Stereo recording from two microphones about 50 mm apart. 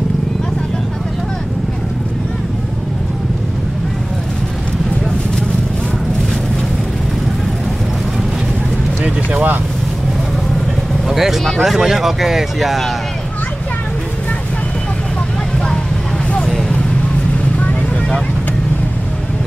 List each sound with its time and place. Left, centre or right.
9.0 s vehicle: right
11.1 s speech: centre
16.4 s vehicle: centre